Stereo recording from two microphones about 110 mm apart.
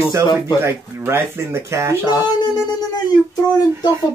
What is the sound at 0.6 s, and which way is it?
Speech, 20° right (ahead or behind).